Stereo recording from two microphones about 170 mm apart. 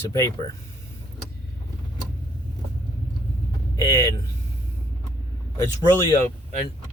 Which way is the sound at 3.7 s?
20° left (ahead or behind).